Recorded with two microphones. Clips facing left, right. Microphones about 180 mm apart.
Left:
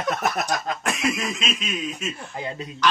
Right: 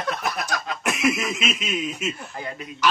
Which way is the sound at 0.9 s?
5° right (ahead or behind).